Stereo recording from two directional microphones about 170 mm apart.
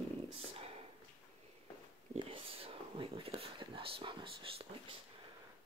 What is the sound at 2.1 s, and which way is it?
Speech, 30° right (ahead or behind).